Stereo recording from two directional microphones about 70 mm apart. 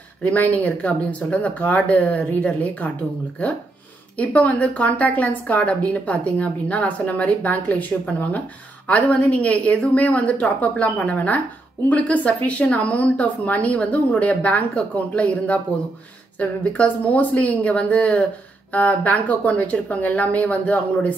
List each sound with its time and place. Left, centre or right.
0.2 s speech: left
4.2 s speech: centre